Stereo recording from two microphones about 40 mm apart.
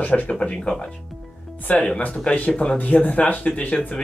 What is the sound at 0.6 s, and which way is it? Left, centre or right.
Speech, centre.